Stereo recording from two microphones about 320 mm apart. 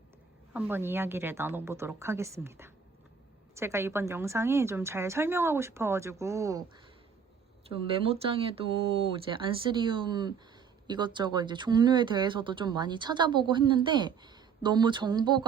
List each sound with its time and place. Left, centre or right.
0.5 s speech: centre
7.7 s speech: centre